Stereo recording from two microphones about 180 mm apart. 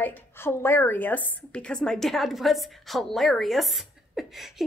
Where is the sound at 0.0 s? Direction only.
15° left (ahead or behind).